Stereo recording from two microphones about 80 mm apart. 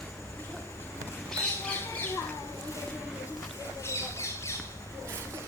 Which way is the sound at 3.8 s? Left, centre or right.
Left.